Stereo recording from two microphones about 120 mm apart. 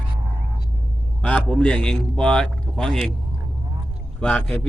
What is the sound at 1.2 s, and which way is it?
A man's voice, 10° left (ahead or behind).